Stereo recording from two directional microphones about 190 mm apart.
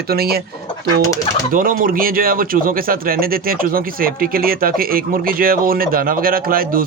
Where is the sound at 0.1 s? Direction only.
55° right (ahead or behind).